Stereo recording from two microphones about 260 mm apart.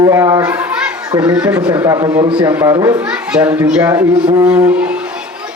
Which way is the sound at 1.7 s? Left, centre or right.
Centre.